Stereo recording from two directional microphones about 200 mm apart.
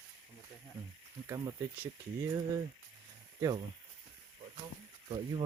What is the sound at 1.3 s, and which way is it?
Speech, 15° right (ahead or behind).